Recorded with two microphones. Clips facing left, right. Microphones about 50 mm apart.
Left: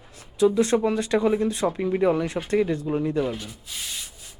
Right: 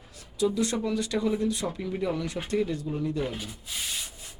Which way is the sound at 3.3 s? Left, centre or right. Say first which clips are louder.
Left 1 dB; centre.